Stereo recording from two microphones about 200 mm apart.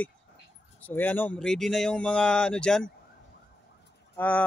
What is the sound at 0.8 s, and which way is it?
Speech, 10° left (ahead or behind).